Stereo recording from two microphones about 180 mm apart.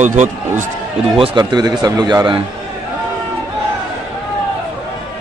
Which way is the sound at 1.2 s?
25° right (ahead or behind).